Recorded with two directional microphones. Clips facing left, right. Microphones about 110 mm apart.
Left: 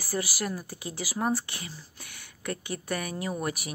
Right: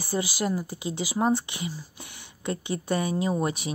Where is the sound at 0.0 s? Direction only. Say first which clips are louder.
Right 4 dB; 20° right (ahead or behind).